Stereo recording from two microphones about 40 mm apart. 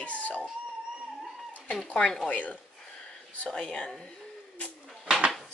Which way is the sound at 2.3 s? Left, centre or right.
Left.